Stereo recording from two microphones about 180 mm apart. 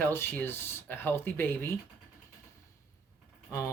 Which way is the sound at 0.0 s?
10° left (ahead or behind).